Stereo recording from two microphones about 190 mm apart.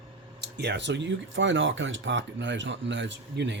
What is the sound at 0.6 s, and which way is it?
Speech, 65° right (ahead or behind).